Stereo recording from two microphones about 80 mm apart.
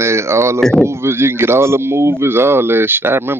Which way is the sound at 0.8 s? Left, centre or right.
Right.